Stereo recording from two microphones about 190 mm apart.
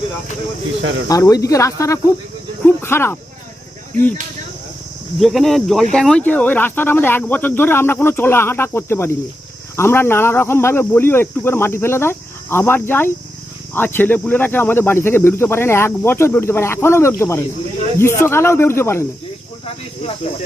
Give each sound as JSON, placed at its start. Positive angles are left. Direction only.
{"t": 0.8, "sound": "speech", "side_deg": -80}
{"t": 1.0, "sound": "speech", "side_deg": 15}
{"t": 5.2, "sound": "speech", "side_deg": 0}